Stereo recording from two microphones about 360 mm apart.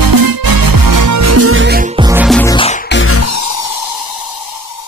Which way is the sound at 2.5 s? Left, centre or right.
Centre.